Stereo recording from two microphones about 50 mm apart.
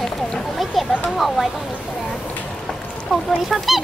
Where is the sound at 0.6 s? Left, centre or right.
Centre.